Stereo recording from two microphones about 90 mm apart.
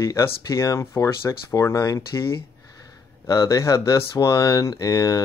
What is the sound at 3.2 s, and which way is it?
Speech, 35° left (ahead or behind).